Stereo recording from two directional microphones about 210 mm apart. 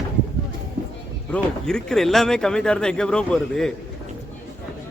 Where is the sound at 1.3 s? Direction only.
5° left (ahead or behind).